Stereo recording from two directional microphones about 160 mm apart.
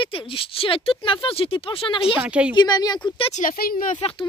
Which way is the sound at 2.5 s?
25° left (ahead or behind).